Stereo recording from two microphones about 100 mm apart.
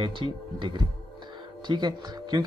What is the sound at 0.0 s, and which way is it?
Speech, 50° right (ahead or behind).